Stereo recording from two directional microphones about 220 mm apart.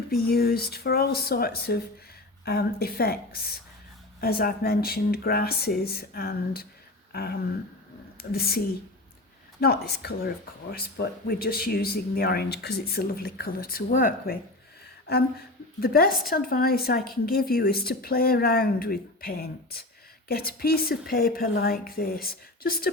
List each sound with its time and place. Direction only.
0.1 s speech: 45° left (ahead or behind)
7.1 s a sound: 45° left (ahead or behind)
8.2 s speech: 45° left (ahead or behind)
15.8 s speech: 45° left (ahead or behind)